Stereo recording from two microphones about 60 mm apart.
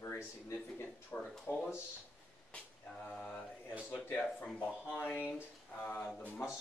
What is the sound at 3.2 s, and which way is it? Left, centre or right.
Speech, left.